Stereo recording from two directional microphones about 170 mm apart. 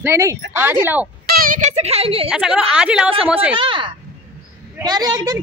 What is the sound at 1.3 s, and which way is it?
Speech, 55° right (ahead or behind).